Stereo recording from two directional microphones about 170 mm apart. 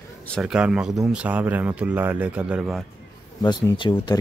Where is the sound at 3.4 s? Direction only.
25° left (ahead or behind).